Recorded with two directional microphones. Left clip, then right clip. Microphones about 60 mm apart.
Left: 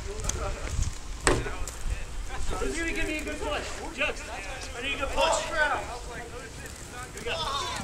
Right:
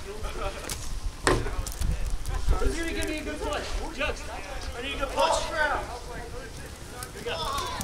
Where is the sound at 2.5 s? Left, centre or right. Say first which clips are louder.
Even; centre.